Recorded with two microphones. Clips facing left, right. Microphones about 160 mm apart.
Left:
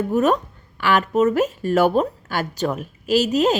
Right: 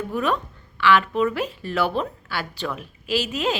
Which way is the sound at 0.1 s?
45° left (ahead or behind).